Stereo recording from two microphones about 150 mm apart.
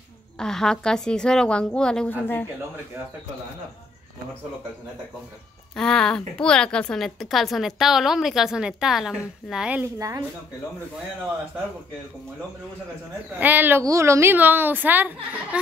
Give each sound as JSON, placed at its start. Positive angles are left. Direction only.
{"t": 0.4, "sound": "a woman's voice", "side_deg": 5}
{"t": 5.8, "sound": "a woman's voice", "side_deg": 5}
{"t": 9.9, "sound": "speech", "side_deg": -25}
{"t": 13.4, "sound": "a woman's voice", "side_deg": -10}